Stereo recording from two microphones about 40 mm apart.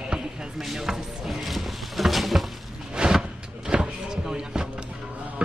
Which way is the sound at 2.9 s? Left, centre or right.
Centre.